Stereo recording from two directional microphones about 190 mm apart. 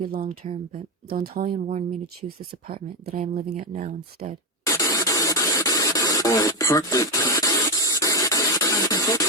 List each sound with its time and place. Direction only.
0.3 s speech: 35° right (ahead or behind)
1.1 s speech: 50° right (ahead or behind)
1.5 s speech: 35° right (ahead or behind)
2.5 s speech: 50° right (ahead or behind)
3.1 s speech: 35° right (ahead or behind)
4.6 s a sound: 15° left (ahead or behind)